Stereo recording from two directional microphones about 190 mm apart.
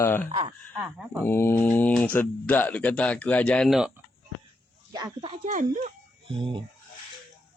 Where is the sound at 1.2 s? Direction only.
10° left (ahead or behind).